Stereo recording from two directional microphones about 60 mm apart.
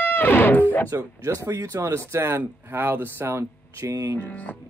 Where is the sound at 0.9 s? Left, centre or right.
Right.